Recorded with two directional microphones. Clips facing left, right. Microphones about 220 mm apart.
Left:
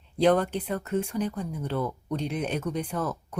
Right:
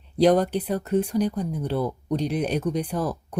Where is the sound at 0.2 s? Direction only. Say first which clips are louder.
Right 4 dB; 40° right (ahead or behind).